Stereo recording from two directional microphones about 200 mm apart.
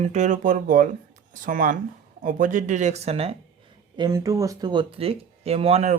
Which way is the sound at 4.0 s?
20° right (ahead or behind).